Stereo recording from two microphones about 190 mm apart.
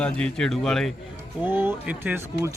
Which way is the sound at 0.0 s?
5° left (ahead or behind).